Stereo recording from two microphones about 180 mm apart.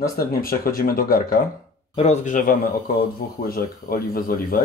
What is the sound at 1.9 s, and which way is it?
Dishes, 35° left (ahead or behind).